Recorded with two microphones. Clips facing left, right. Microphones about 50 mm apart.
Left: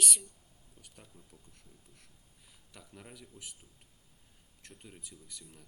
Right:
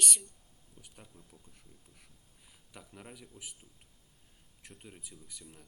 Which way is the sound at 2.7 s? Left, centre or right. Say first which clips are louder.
Right 2 dB; centre.